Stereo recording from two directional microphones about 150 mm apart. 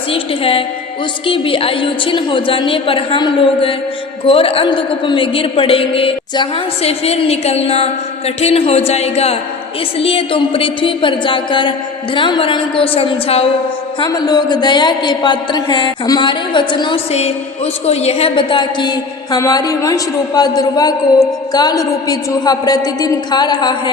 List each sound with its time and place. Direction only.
0.1 s a woman's voice: 40° left (ahead or behind)
14.0 s a woman's voice: 25° left (ahead or behind)
17.1 s a woman's voice: 45° left (ahead or behind); by 23.9 s 30° left (ahead or behind)